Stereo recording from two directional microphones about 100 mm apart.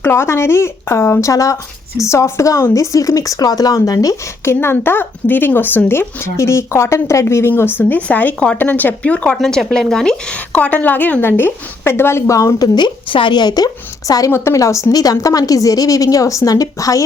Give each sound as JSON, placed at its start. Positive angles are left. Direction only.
{"t": 0.0, "sound": "speech", "side_deg": 25}
{"t": 14.3, "sound": "a woman's voice", "side_deg": 25}